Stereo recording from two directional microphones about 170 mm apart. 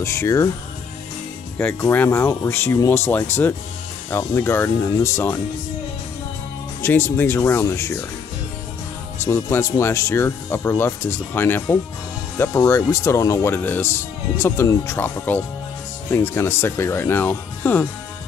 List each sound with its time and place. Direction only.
0.0 s speech: 15° left (ahead or behind)
1.6 s speech: 10° left (ahead or behind)
6.8 s speech: 15° left (ahead or behind)
9.2 s speech: 15° left (ahead or behind)